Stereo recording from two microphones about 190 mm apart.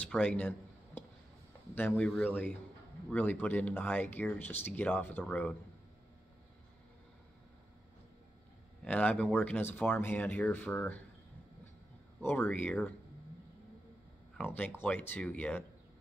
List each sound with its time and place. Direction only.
0.0 s a sound: 5° left (ahead or behind)
1.8 s speech: 10° left (ahead or behind)
8.8 s speech: 5° left (ahead or behind)
12.2 s speech: 10° left (ahead or behind)
14.3 s speech: 5° left (ahead or behind)